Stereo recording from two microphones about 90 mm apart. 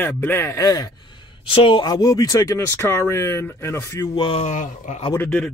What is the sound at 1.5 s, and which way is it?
Speech, 85° left.